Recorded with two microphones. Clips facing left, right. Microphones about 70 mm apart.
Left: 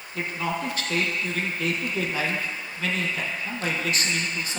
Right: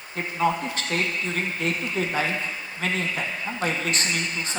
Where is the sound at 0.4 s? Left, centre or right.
Right.